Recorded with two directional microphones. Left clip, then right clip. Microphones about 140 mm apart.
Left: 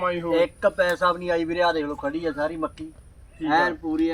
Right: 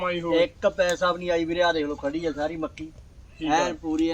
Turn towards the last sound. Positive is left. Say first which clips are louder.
# left 2 dB
turn(degrees=-55)  # may be behind; listen again after turning